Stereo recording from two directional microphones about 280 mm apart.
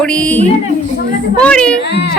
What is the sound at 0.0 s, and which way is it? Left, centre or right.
A woman's voice, centre.